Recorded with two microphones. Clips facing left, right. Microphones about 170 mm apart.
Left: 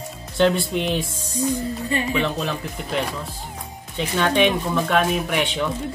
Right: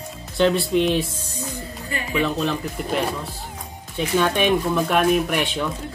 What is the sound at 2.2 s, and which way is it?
Speech, centre (ahead or behind).